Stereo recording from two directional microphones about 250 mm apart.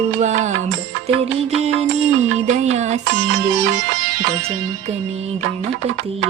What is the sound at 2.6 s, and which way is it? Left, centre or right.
Music, right.